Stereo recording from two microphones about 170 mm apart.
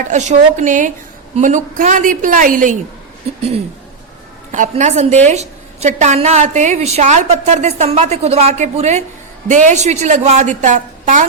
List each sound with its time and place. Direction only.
0.0 s a woman's voice: 45° right (ahead or behind)
4.5 s a woman's voice: 45° right (ahead or behind)